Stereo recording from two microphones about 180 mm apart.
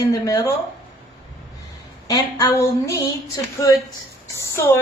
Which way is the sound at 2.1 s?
20° left (ahead or behind).